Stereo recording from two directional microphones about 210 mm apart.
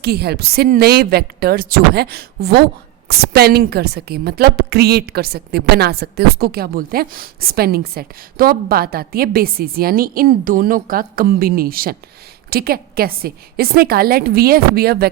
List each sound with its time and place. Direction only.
0.0 s a woman's voice: 50° right (ahead or behind)